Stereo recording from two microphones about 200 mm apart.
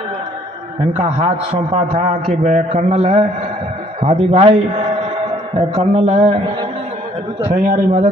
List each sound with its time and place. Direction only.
0.9 s a man's voice: 30° right (ahead or behind)
7.5 s a man's voice: 40° right (ahead or behind)